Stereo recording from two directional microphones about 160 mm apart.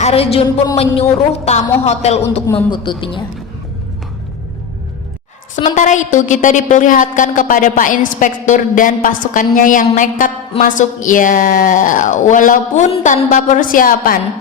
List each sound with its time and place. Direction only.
0.0 s a woman's voice: 40° left (ahead or behind)
2.6 s speech: 30° left (ahead or behind)
5.7 s a woman's voice: 50° left (ahead or behind)